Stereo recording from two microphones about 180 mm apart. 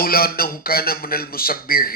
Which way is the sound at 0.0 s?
55° left (ahead or behind).